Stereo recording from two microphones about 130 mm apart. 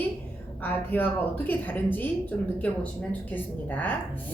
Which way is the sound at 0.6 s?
15° left (ahead or behind).